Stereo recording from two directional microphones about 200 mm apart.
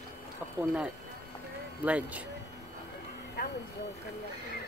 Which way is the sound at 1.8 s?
5° right (ahead or behind).